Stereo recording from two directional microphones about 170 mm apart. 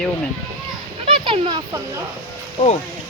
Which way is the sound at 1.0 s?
30° right (ahead or behind).